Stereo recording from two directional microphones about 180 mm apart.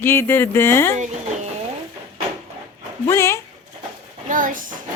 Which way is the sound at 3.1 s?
15° left (ahead or behind).